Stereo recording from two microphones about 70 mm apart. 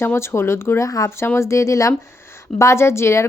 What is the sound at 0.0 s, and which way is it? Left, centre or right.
Speech, left.